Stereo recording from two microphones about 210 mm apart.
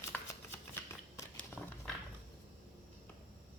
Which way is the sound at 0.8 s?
10° left (ahead or behind).